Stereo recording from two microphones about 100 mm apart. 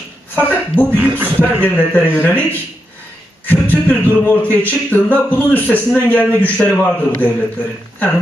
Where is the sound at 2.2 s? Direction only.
15° left (ahead or behind).